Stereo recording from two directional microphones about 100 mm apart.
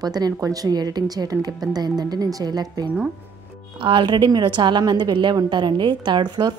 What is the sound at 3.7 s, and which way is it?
A woman's voice, 55° right (ahead or behind).